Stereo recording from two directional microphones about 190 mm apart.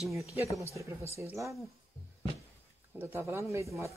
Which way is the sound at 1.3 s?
15° right (ahead or behind).